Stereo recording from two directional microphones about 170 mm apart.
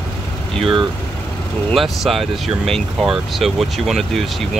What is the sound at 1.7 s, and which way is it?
Speech, centre (ahead or behind).